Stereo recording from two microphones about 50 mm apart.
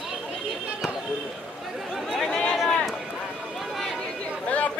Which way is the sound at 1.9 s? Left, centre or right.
Centre.